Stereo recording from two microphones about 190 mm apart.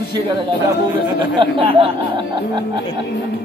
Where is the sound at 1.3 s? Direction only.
25° right (ahead or behind).